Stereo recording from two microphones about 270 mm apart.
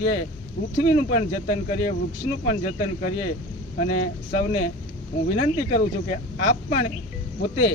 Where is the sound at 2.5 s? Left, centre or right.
Left.